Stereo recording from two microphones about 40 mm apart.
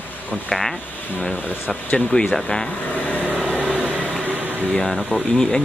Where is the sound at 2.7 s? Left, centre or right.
Left.